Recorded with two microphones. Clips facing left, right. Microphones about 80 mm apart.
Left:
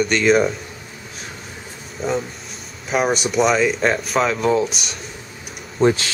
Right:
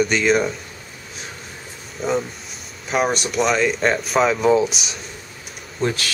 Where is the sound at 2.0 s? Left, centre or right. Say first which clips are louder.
Right 1 dB; centre.